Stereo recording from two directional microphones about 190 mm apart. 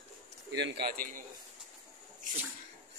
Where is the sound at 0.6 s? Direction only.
65° right (ahead or behind).